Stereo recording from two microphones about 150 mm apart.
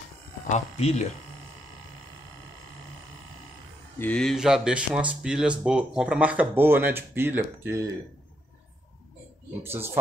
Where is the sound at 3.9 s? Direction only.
10° left (ahead or behind); by 7.8 s 15° right (ahead or behind).